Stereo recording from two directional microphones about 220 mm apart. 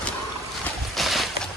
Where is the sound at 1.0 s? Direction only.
Centre (ahead or behind).